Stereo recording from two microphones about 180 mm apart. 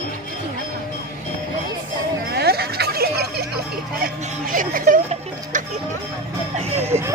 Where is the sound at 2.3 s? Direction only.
60° right (ahead or behind).